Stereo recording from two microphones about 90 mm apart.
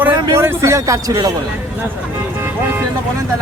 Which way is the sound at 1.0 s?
45° right (ahead or behind).